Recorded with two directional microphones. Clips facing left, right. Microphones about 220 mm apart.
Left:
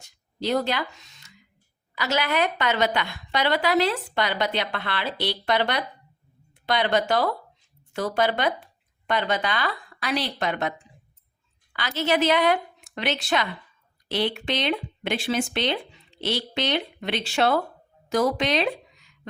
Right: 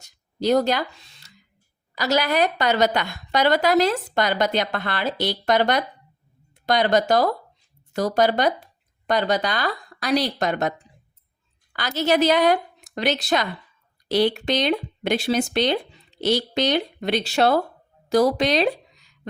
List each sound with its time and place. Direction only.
0.0 s a woman's voice: 40° right (ahead or behind)